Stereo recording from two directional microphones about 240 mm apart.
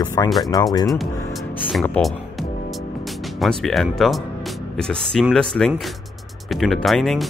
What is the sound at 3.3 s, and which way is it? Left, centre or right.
Speech, centre.